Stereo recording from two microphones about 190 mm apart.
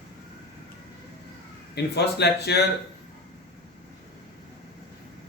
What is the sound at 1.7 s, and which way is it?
Speech, 60° left (ahead or behind).